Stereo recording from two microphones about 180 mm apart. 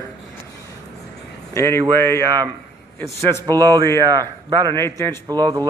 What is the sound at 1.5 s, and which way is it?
Speech, 15° left (ahead or behind).